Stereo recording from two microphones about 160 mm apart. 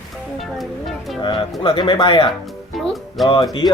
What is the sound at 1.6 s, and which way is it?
Speech, 35° left (ahead or behind).